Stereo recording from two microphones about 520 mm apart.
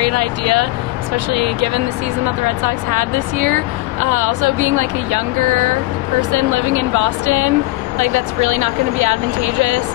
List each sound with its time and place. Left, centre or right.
0.0 s speech: right